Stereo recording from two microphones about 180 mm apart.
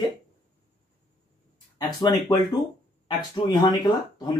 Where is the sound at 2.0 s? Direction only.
20° left (ahead or behind).